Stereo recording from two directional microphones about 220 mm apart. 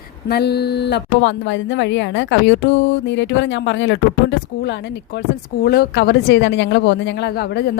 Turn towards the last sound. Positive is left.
turn(degrees=50)  # may be behind; listen again after turning